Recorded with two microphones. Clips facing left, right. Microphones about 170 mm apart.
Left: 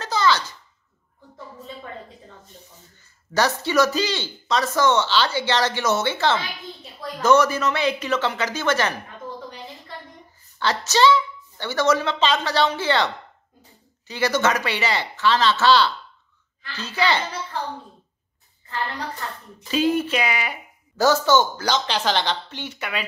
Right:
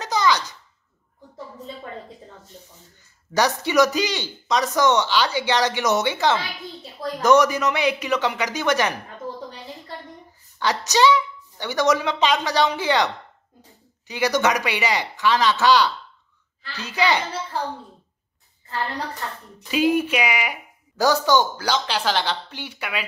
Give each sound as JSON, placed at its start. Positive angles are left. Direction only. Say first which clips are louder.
{"t": 0.0, "sound": "a sound", "louder": "even", "side_deg": -15}
{"t": 3.3, "sound": "speech", "louder": "right 1 dB", "side_deg": -15}
{"t": 10.6, "sound": "speech", "louder": "even", "side_deg": -15}
{"t": 19.7, "sound": "speech", "louder": "right 1 dB", "side_deg": -10}